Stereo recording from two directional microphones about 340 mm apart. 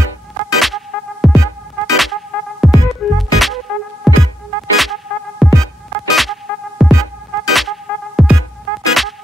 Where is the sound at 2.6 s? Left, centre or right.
Centre.